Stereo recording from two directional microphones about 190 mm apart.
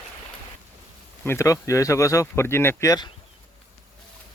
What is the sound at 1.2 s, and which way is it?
Speech, 15° left (ahead or behind).